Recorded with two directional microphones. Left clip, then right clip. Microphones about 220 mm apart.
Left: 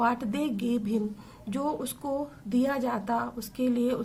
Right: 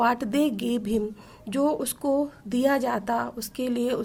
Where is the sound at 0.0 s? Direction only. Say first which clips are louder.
Right 5 dB; 40° right (ahead or behind).